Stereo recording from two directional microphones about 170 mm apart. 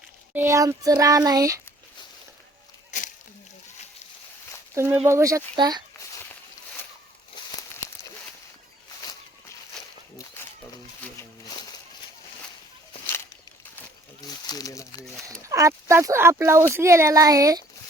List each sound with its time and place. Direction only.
0.3 s child singing: 15° right (ahead or behind)
4.7 s speech: 15° right (ahead or behind)
5.0 s child singing: 15° right (ahead or behind)
11.0 s a sound: 15° left (ahead or behind)
14.4 s crumpling: 20° left (ahead or behind)
15.3 s speech: 20° right (ahead or behind)